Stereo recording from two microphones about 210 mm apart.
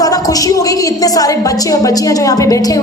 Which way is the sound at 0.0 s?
15° left (ahead or behind).